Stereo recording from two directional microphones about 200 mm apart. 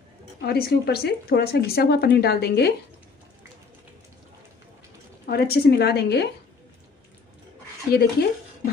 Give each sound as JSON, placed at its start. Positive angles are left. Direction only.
{"t": 0.5, "sound": "speech", "side_deg": 50}
{"t": 5.2, "sound": "speech", "side_deg": 50}
{"t": 7.9, "sound": "speech", "side_deg": 50}